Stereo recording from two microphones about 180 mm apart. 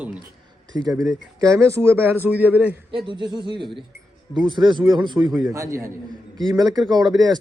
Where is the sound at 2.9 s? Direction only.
25° right (ahead or behind).